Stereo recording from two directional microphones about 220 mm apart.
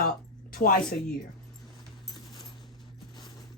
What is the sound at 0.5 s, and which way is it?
Speech, 40° left (ahead or behind).